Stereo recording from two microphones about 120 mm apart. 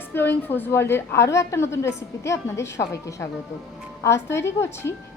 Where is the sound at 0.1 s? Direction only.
15° left (ahead or behind).